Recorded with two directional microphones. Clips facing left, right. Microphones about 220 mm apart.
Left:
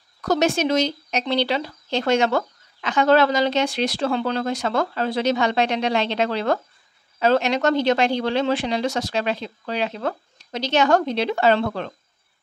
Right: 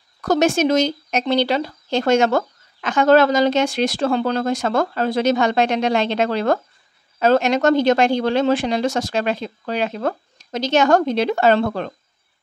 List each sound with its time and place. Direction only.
0.2 s speech: 50° right (ahead or behind)